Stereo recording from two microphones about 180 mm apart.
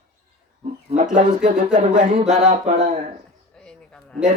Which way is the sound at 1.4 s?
40° right (ahead or behind).